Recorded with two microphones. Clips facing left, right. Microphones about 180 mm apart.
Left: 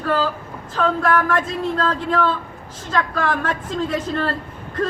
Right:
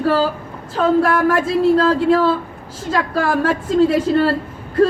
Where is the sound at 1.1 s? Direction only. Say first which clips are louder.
Right 3 dB; 10° right (ahead or behind).